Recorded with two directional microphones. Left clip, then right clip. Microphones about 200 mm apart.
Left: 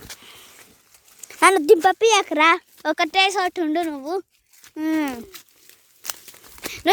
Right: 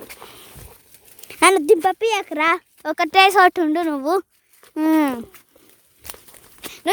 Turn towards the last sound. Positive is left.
turn(degrees=55)  # may be behind; listen again after turning